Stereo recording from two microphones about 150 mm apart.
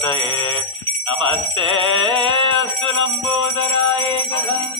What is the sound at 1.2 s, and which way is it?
Music, 35° right (ahead or behind).